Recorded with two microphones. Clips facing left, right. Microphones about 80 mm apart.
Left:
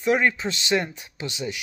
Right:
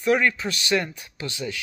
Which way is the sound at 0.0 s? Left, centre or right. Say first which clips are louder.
Even; left.